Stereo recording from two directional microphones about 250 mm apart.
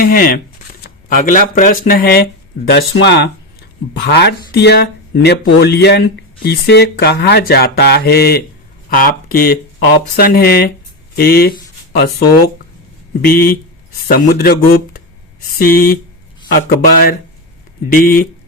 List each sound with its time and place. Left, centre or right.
0.0 s speech: left
13.2 s speech: left